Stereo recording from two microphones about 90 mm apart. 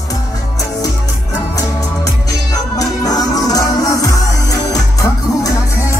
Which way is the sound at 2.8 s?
45° left (ahead or behind).